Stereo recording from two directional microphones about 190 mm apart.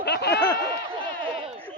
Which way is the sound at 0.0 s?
60° left (ahead or behind).